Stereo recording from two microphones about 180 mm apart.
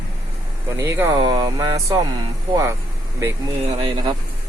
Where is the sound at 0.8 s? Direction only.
15° right (ahead or behind).